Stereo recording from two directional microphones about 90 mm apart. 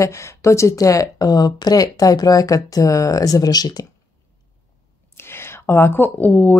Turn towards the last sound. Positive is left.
turn(degrees=15)  # may be behind; listen again after turning